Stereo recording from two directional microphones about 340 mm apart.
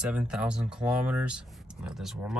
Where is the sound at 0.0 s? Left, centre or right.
Centre.